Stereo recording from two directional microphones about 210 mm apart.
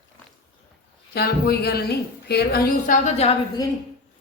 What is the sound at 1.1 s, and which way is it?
A woman's voice, 50° left (ahead or behind).